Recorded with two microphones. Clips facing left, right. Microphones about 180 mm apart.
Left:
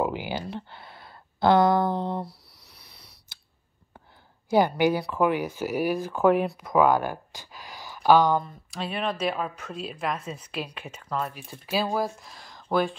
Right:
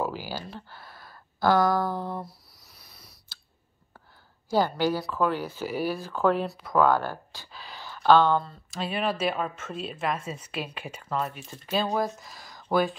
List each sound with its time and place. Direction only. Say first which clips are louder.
0.0 s speech: left 3 dB; 20° left (ahead or behind)
4.5 s speech: left 3 dB; 20° left (ahead or behind)
8.6 s a woman's voice: right 1 dB; centre (ahead or behind)
11.3 s a woman's voice: even; 5° left (ahead or behind)